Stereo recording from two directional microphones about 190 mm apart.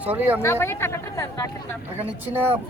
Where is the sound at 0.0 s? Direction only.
10° right (ahead or behind).